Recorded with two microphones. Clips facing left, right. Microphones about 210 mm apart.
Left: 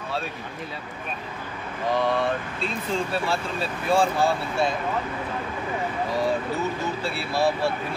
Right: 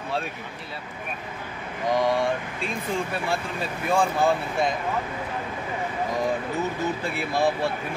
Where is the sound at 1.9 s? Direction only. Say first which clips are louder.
Right 1 dB; 15° right (ahead or behind).